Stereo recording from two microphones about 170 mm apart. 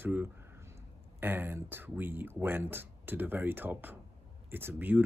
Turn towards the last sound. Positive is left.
turn(degrees=-10)  # may be behind; listen again after turning